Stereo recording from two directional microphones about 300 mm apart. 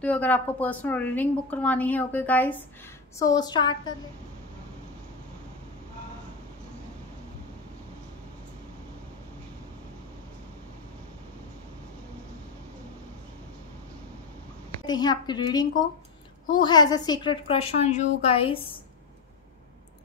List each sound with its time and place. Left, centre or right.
0.0 s a woman's voice: centre
14.9 s a woman's voice: centre